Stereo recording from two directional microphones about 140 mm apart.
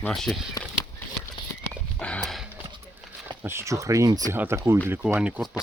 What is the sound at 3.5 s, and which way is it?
Speech, 20° right (ahead or behind).